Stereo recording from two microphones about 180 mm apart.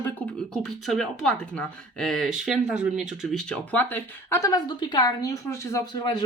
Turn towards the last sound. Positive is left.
turn(degrees=20)  # may be behind; listen again after turning